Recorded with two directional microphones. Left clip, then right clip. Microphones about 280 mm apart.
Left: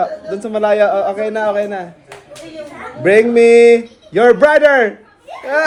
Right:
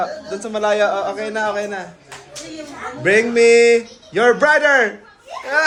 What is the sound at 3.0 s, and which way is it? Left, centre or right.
A man's voice, centre.